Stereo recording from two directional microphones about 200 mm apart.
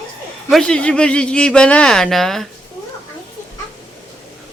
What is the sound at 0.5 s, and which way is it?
Speech, 5° left (ahead or behind).